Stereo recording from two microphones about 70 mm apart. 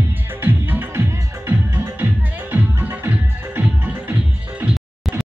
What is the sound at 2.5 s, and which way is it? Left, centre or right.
Music, right.